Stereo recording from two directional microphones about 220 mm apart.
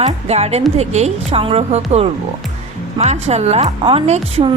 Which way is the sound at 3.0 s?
30° right (ahead or behind).